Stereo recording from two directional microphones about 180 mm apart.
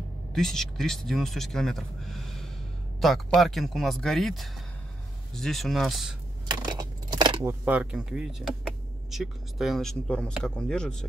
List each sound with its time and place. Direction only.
0.3 s speech: centre (ahead or behind)
6.4 s a sound: 20° right (ahead or behind)
7.6 s speech: 5° right (ahead or behind)